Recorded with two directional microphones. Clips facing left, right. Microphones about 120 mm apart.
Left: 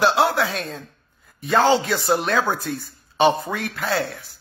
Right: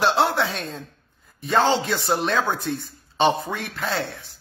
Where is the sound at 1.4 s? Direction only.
Centre (ahead or behind).